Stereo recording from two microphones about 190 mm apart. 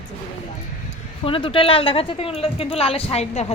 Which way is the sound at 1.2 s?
30° left (ahead or behind).